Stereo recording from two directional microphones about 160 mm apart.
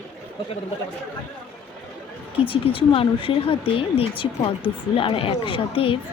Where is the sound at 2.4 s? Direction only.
35° left (ahead or behind).